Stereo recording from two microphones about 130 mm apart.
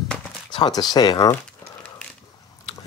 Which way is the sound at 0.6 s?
35° left (ahead or behind).